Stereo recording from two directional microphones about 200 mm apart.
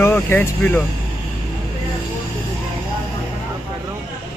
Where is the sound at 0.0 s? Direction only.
10° left (ahead or behind).